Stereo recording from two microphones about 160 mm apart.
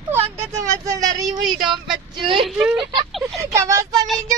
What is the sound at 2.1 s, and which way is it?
Speech, 30° right (ahead or behind).